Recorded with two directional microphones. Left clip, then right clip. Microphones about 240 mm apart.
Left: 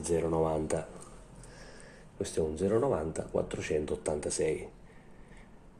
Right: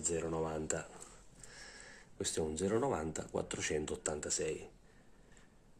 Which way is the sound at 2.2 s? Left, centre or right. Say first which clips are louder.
Left 6 dB; right.